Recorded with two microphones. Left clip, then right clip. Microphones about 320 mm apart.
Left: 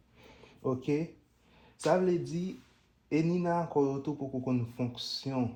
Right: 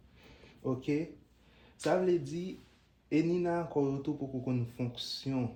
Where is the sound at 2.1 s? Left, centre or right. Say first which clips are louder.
Even; centre.